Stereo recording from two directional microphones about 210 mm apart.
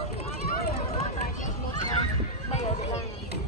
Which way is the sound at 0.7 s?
35° left (ahead or behind).